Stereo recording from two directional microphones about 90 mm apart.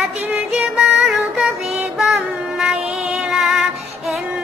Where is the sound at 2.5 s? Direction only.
5° right (ahead or behind).